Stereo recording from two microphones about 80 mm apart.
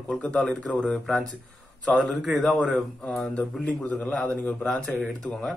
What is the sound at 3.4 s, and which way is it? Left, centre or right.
A man's voice, centre.